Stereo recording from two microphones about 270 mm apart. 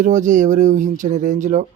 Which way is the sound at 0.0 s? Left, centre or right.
Right.